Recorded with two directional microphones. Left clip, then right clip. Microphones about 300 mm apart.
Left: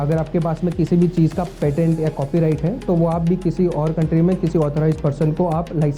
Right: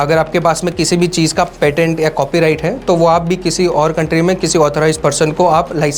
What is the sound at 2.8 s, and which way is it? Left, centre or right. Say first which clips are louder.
Speech: right 10 dB; right.